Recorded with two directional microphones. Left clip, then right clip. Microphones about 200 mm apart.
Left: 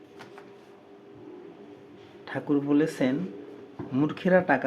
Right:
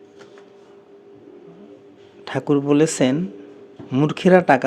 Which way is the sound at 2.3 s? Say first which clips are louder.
Right 8 dB; 50° right (ahead or behind).